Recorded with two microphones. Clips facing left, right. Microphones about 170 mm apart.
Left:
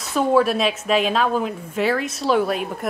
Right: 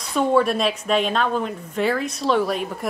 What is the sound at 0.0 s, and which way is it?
A woman's voice, 5° left (ahead or behind).